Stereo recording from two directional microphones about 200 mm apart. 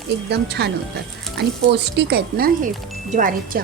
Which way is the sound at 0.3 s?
55° right (ahead or behind).